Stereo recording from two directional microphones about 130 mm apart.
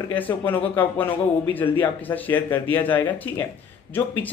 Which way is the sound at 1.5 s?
15° left (ahead or behind).